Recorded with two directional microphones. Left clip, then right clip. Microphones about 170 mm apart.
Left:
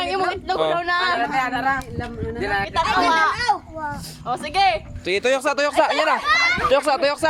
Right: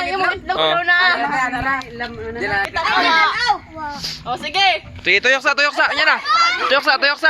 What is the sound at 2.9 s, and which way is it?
Speech, 30° left (ahead or behind).